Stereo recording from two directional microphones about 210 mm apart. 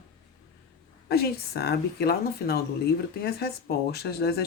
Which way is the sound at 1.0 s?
50° left (ahead or behind).